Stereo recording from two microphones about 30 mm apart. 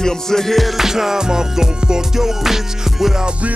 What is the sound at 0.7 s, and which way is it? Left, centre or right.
Music, centre.